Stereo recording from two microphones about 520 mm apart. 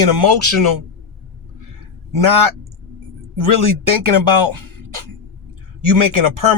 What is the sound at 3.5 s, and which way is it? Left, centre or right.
Speech, right.